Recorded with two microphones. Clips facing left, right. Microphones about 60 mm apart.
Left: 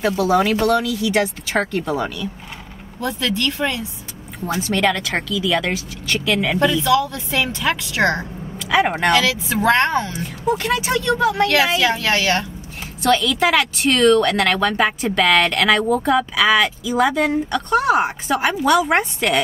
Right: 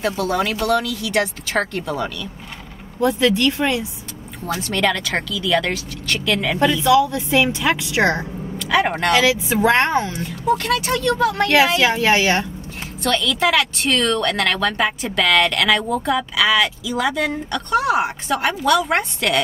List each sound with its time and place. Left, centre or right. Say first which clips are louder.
0.0 s speech: left 4 dB; centre
3.0 s a woman's voice: right 5 dB; right
4.6 s speech: left 2 dB; centre
6.8 s a woman's voice: right 2 dB; centre
8.5 s speech: left 1 dB; centre
9.1 s a woman's voice: right 1 dB; right
10.1 s speech: right 1 dB; centre
11.8 s a woman's voice: right 2 dB; right
13.0 s speech: left 2 dB; centre